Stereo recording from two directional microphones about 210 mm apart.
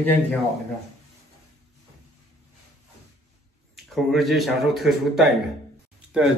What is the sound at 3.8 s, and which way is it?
A man's voice, centre (ahead or behind).